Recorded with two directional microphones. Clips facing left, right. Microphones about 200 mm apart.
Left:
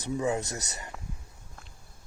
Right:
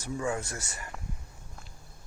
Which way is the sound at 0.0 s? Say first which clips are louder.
Left 3 dB; 20° left (ahead or behind).